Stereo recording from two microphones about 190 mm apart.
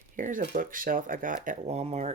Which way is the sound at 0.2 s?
45° right (ahead or behind).